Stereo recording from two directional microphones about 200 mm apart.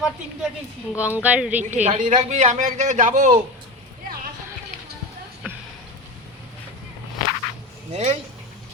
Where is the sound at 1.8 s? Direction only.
35° right (ahead or behind).